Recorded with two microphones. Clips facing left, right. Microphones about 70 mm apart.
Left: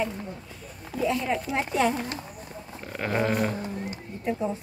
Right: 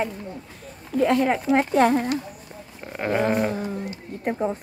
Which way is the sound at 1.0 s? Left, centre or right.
Right.